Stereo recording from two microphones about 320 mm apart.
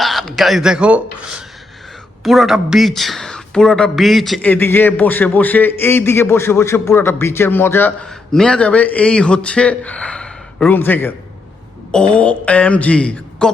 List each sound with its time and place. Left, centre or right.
0.0 s speech: centre